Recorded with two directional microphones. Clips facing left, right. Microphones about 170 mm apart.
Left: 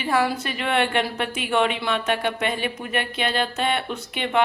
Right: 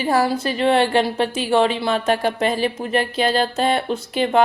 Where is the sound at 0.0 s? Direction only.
35° right (ahead or behind).